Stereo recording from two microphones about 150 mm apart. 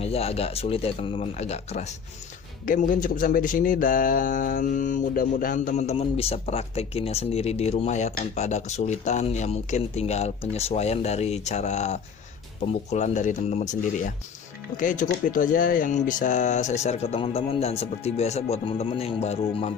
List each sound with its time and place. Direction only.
0.0 s speech: 40° left (ahead or behind)
2.6 s speech: 65° left (ahead or behind); by 19.7 s 45° left (ahead or behind)